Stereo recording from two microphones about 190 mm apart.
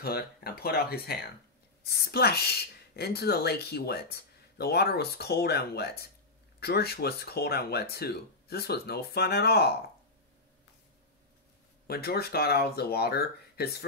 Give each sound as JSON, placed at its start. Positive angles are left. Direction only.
{"t": 0.0, "sound": "speech", "side_deg": 55}
{"t": 11.9, "sound": "speech", "side_deg": 55}